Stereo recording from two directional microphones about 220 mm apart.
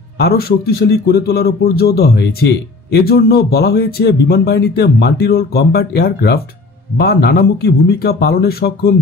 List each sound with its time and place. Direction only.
0.2 s speech: 45° left (ahead or behind)